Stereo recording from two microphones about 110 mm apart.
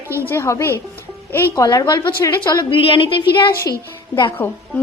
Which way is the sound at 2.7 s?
55° left (ahead or behind).